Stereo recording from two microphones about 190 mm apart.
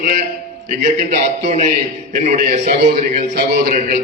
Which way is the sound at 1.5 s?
35° right (ahead or behind).